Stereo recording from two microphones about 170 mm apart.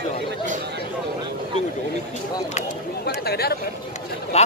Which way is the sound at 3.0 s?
70° left (ahead or behind).